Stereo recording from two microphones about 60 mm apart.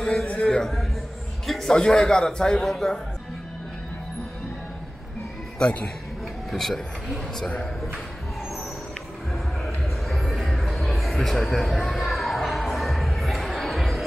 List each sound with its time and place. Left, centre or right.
0.0 s a sound: centre
1.5 s a man's voice: centre
5.6 s a man's voice: centre
6.5 s a man's voice: centre
10.0 s music: centre